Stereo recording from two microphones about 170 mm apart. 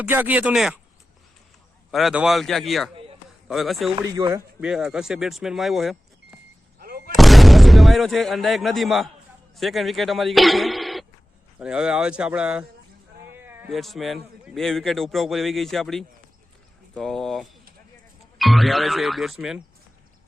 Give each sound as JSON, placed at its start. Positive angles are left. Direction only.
{"t": 0.0, "sound": "speech", "side_deg": -10}
{"t": 1.9, "sound": "a man's voice", "side_deg": 0}
{"t": 2.9, "sound": "a sound", "side_deg": -35}
{"t": 3.5, "sound": "a man's voice", "side_deg": 0}
{"t": 4.1, "sound": "speech", "side_deg": -20}
{"t": 4.6, "sound": "a man's voice", "side_deg": -5}
{"t": 6.7, "sound": "artillery fire", "side_deg": -60}
{"t": 7.2, "sound": "a man's voice", "side_deg": 0}
{"t": 13.3, "sound": "a sound", "side_deg": -10}
{"t": 13.7, "sound": "a man's voice", "side_deg": 0}